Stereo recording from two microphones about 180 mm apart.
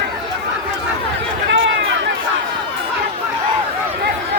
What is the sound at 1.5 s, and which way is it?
Run, 90° right.